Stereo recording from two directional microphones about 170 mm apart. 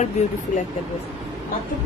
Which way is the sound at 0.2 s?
40° left (ahead or behind).